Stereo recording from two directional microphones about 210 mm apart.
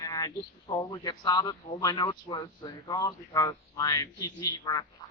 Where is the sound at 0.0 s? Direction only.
15° left (ahead or behind).